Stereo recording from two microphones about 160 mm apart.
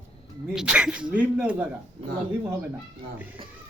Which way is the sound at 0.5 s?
5° right (ahead or behind).